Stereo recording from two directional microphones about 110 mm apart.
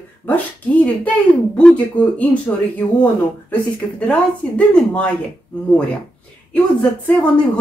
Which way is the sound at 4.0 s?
10° left (ahead or behind).